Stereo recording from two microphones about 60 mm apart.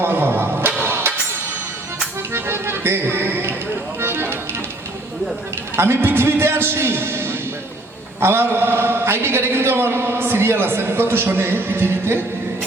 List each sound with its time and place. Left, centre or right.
0.0 s music: right
0.8 s a sound: right
2.3 s music: right
5.7 s a man's voice: right